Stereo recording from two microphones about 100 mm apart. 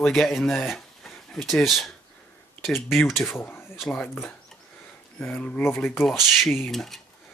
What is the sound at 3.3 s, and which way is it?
Speech, 25° left (ahead or behind).